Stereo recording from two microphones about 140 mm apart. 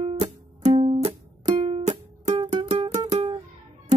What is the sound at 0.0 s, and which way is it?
Music, 45° right (ahead or behind).